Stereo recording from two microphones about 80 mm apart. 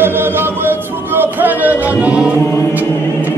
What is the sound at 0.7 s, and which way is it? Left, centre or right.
Music, right.